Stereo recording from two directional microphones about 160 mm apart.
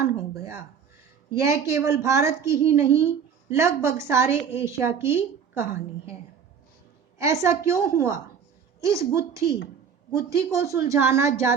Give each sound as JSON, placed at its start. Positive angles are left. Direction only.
{"t": 1.4, "sound": "a woman's voice", "side_deg": -20}
{"t": 7.2, "sound": "a woman's voice", "side_deg": -20}